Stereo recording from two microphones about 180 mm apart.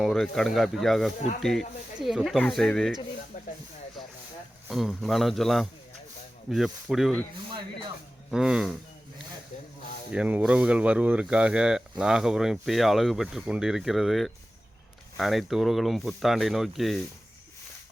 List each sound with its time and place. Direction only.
0.0 s speech: centre (ahead or behind)
3.3 s snake: 45° left (ahead or behind)
4.7 s speech: centre (ahead or behind)
8.3 s speech: 5° right (ahead or behind)
10.1 s speech: 5° right (ahead or behind)